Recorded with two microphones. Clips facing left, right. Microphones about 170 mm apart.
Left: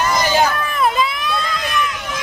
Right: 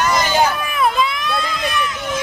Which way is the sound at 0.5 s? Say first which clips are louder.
Left 1 dB; 10° right (ahead or behind).